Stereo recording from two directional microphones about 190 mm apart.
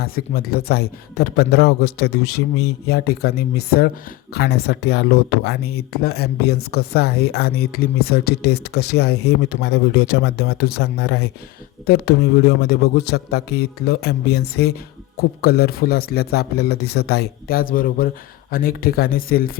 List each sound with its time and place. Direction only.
0.0 s speech: 55° left (ahead or behind)